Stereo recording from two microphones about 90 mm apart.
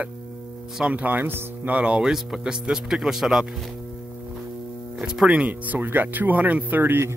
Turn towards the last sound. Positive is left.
turn(degrees=-20)  # may be behind; listen again after turning